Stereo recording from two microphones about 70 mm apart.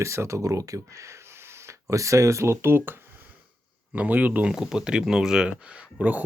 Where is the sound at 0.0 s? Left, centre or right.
Right.